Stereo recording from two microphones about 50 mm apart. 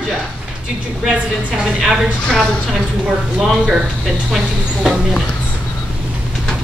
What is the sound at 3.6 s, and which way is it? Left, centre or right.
A woman's voice, centre.